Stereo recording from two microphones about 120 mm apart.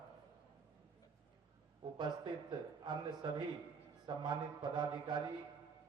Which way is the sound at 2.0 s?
40° right (ahead or behind).